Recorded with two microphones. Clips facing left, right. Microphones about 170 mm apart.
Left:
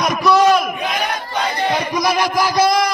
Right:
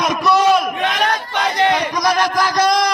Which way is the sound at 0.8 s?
90° right.